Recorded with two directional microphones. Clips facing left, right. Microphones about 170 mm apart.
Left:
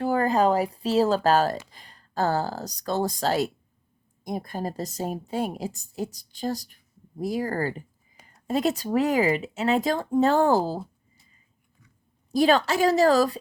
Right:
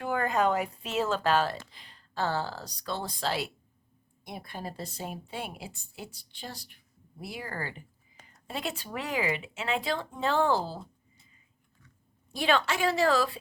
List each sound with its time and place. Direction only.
0.0 s a woman's voice: 35° left (ahead or behind)
12.3 s a woman's voice: 40° left (ahead or behind)